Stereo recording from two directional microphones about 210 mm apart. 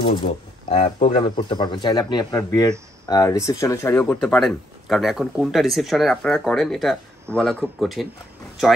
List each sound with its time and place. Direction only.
0.0 s speech: 25° left (ahead or behind); by 8.1 s centre (ahead or behind)